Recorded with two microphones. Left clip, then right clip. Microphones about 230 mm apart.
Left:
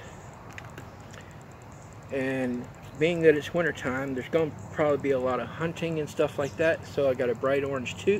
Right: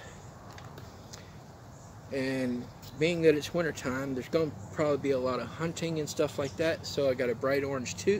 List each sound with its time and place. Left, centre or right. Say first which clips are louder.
2.1 s speech: left 3 dB; centre